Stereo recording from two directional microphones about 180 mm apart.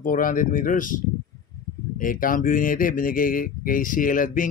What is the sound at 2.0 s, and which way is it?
Speech, 50° left (ahead or behind).